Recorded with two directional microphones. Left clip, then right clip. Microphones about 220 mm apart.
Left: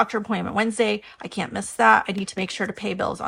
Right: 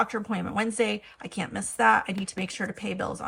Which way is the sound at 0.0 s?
10° left (ahead or behind).